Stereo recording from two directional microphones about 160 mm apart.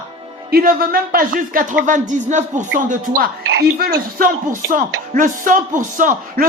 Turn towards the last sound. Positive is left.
turn(degrees=-55)  # may be behind; listen again after turning